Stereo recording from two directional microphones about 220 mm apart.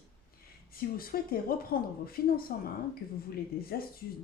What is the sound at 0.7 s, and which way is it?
A woman's voice, 40° left (ahead or behind).